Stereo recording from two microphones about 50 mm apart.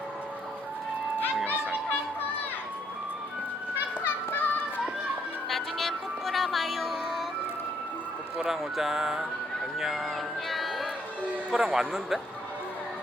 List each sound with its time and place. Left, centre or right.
4.0 s children playing: left
5.5 s music: centre
8.4 s music: centre
9.7 s speech: centre
10.5 s music: centre
11.5 s music: centre